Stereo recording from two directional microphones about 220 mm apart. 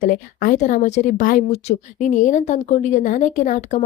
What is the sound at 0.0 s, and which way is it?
A woman's voice, 40° left (ahead or behind).